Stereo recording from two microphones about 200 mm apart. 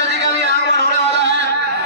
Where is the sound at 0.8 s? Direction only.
60° right (ahead or behind).